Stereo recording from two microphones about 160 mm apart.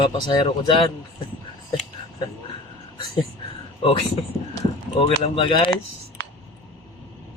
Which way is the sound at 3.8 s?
35° left (ahead or behind).